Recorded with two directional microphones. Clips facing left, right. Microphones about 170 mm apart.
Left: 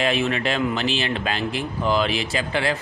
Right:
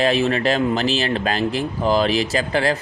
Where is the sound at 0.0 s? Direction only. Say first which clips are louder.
Right 4 dB; 35° right (ahead or behind).